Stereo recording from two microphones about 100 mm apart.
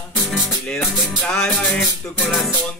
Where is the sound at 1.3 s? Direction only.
10° left (ahead or behind).